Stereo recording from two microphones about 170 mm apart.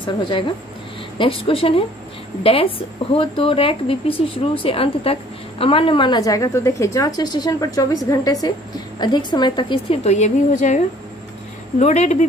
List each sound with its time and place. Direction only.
0.0 s a woman's voice: 30° left (ahead or behind)
10.0 s a woman's voice: 40° left (ahead or behind)
11.8 s a woman's voice: 40° left (ahead or behind)